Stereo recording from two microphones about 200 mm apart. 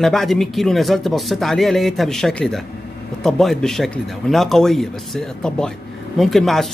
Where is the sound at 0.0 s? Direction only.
Centre (ahead or behind).